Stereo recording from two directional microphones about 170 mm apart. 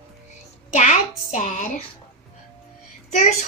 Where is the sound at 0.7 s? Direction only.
45° left (ahead or behind).